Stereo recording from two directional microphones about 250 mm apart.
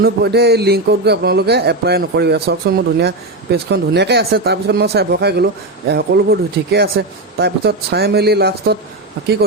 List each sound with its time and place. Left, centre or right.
0.0 s a man's voice: right